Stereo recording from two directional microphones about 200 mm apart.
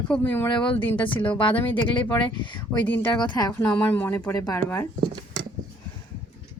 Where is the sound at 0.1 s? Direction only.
10° left (ahead or behind).